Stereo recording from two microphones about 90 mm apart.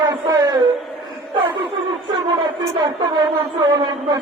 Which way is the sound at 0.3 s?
40° right (ahead or behind).